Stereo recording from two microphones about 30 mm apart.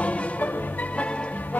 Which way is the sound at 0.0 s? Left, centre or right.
Left.